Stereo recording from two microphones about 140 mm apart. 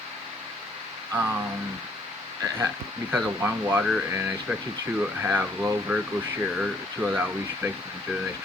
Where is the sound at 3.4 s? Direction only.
15° right (ahead or behind).